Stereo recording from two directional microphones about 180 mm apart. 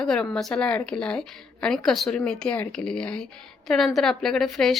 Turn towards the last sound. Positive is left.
turn(degrees=0)  # may be behind; listen again after turning